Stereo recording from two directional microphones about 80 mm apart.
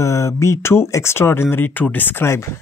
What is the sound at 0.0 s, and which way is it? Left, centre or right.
Speech, left.